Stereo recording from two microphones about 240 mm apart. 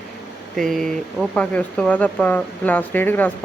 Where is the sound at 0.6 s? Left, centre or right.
Centre.